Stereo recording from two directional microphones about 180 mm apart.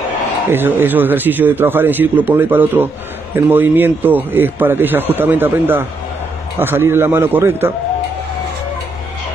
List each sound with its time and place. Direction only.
0.5 s speech: 10° right (ahead or behind)